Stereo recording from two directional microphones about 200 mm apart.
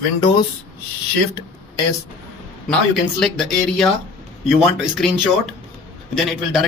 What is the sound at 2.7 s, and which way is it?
Speech, 5° left (ahead or behind).